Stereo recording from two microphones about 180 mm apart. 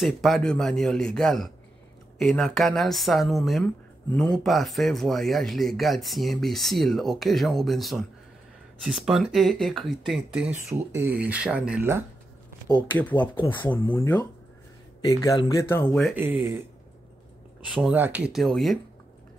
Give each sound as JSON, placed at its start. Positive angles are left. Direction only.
{"t": 0.0, "sound": "speech", "side_deg": 0}
{"t": 12.6, "sound": "speech", "side_deg": 25}
{"t": 13.0, "sound": "speech", "side_deg": 10}
{"t": 15.9, "sound": "speech", "side_deg": 5}
{"t": 16.2, "sound": "speech", "side_deg": -10}
{"t": 17.6, "sound": "speech", "side_deg": -5}